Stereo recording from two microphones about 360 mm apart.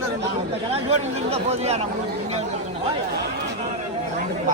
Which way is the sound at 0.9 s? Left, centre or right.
Centre.